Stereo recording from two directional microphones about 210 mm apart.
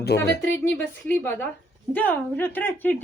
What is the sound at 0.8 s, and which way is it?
Speech, 10° left (ahead or behind).